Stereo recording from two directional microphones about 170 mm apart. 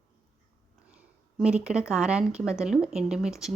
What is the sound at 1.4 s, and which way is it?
Speech, 5° right (ahead or behind).